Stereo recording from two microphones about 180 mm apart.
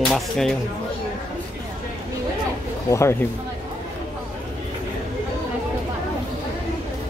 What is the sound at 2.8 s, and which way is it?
Speech, 15° left (ahead or behind).